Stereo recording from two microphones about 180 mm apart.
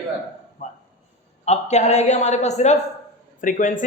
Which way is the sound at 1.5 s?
40° left (ahead or behind).